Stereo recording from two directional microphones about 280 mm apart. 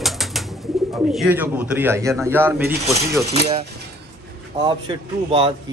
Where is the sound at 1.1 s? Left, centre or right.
Centre.